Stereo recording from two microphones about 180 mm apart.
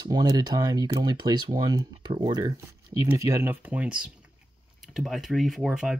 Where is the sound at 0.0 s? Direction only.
20° right (ahead or behind).